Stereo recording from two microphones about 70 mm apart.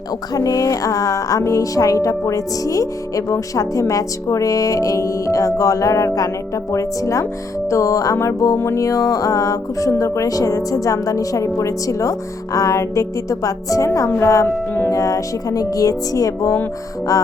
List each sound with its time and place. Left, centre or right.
0.3 s speech: left
7.7 s music: left
8.5 s speech: left
14.2 s music: left
14.8 s speech: left